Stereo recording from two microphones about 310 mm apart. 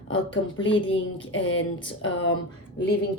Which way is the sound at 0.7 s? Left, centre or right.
Centre.